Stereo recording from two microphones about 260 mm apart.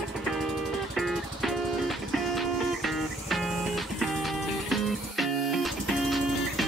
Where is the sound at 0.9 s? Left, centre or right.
Centre.